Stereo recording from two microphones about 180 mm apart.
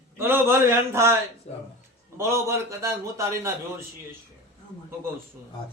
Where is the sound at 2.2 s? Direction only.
15° right (ahead or behind).